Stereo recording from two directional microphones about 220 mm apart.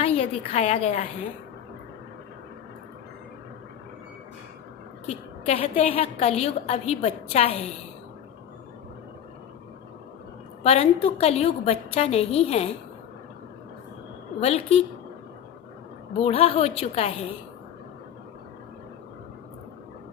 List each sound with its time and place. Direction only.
0.0 s a woman's voice: 30° left (ahead or behind)
5.0 s a woman's voice: 30° left (ahead or behind)
10.6 s a woman's voice: 30° left (ahead or behind)
14.4 s a woman's voice: 30° left (ahead or behind)
16.2 s a woman's voice: 25° left (ahead or behind)